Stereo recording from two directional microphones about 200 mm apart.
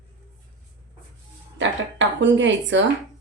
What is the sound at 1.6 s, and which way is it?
A woman's voice, 65° right (ahead or behind).